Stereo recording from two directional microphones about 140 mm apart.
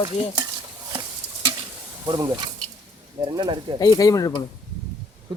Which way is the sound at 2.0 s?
30° right (ahead or behind).